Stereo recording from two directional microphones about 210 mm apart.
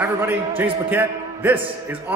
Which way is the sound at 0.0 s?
10° right (ahead or behind).